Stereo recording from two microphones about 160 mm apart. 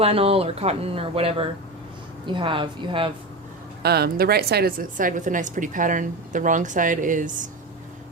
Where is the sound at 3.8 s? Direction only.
80° right.